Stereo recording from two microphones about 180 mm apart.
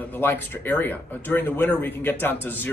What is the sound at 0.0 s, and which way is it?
A man's voice, 10° left (ahead or behind).